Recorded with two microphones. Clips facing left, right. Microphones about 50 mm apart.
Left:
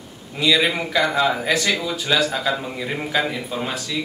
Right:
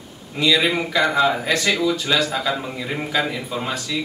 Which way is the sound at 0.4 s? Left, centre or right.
Centre.